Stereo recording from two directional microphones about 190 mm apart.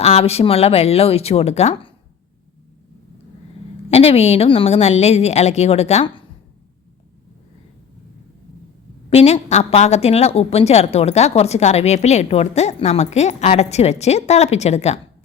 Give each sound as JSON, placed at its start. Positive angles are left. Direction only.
{"t": 0.0, "sound": "a woman's voice", "side_deg": 35}
{"t": 3.8, "sound": "a woman's voice", "side_deg": 35}
{"t": 9.0, "sound": "a woman's voice", "side_deg": 35}